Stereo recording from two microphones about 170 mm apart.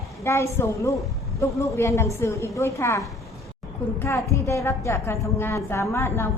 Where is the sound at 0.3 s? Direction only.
15° left (ahead or behind).